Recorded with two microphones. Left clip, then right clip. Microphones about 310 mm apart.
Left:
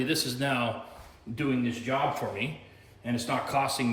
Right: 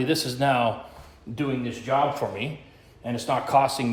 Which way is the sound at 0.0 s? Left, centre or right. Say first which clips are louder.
Right 5 dB; centre.